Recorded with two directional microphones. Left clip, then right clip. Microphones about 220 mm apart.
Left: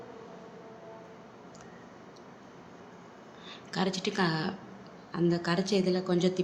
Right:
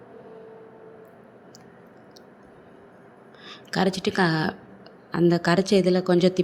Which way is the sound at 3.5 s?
30° right (ahead or behind).